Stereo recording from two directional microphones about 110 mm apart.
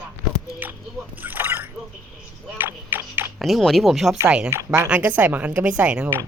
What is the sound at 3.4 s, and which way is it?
Speech, centre (ahead or behind).